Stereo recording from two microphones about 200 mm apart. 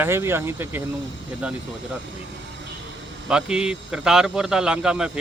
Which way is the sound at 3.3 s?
5° right (ahead or behind).